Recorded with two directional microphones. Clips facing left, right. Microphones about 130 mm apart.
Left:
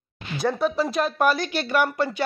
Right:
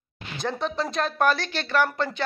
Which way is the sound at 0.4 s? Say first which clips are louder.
Left 5 dB; 5° left (ahead or behind).